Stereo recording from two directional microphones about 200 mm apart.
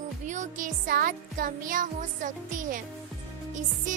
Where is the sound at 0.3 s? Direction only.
40° right (ahead or behind).